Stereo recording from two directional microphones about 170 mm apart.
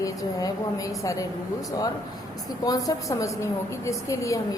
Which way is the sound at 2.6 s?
20° left (ahead or behind).